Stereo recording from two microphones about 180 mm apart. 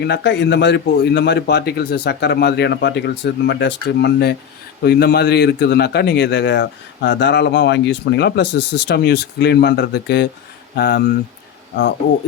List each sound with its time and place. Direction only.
0.0 s a man's voice: 75° left (ahead or behind)